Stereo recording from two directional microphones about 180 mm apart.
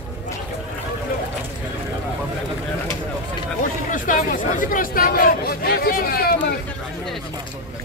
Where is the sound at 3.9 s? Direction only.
45° left (ahead or behind).